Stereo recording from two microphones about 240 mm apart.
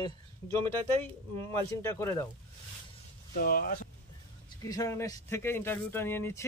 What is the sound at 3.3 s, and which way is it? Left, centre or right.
Speech, left.